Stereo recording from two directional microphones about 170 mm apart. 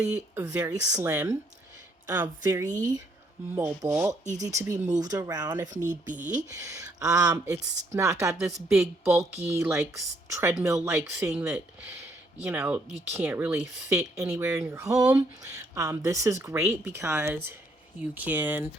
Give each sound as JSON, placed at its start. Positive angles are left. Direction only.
{"t": 0.1, "sound": "speech", "side_deg": -20}
{"t": 2.6, "sound": "speech", "side_deg": -50}
{"t": 3.5, "sound": "speech", "side_deg": -15}
{"t": 4.1, "sound": "speech", "side_deg": -45}
{"t": 4.4, "sound": "speech", "side_deg": -20}
{"t": 5.7, "sound": "speech", "side_deg": -50}
{"t": 6.2, "sound": "speech", "side_deg": -20}